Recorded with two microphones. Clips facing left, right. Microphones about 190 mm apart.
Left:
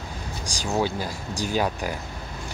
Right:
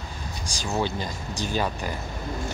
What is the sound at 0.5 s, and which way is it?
Speech, 15° left (ahead or behind).